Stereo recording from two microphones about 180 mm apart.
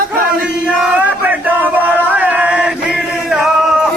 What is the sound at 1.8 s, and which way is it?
Male singing, 10° right (ahead or behind).